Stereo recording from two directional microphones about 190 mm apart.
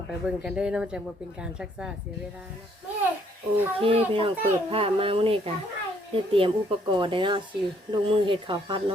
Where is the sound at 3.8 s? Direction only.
30° right (ahead or behind).